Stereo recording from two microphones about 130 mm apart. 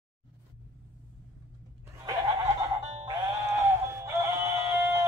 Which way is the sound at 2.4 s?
30° right (ahead or behind).